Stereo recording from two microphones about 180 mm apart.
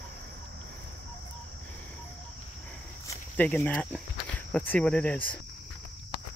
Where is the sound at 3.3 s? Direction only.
10° left (ahead or behind).